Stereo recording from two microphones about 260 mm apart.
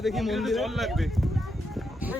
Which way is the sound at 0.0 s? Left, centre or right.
Centre.